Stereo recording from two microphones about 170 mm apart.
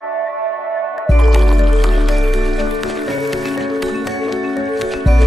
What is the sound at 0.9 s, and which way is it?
Music, centre (ahead or behind).